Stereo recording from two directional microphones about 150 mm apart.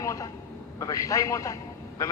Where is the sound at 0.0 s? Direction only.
20° left (ahead or behind).